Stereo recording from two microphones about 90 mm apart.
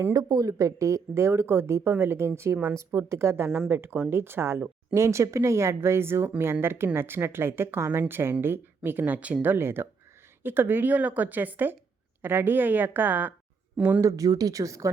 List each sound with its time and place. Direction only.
0.1 s a woman's voice: 45° right (ahead or behind); by 14.0 s 20° right (ahead or behind)
14.0 s a woman's voice: 40° right (ahead or behind)